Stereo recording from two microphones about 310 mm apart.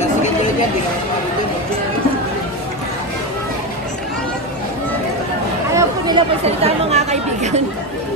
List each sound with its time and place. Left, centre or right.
5.8 s speech: centre